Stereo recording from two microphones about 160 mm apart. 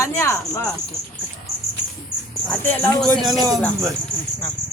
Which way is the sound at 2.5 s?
10° left (ahead or behind).